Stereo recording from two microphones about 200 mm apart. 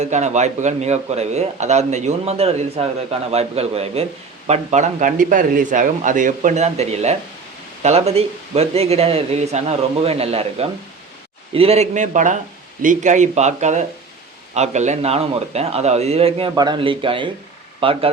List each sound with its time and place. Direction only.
0.0 s speech: 35° right (ahead or behind)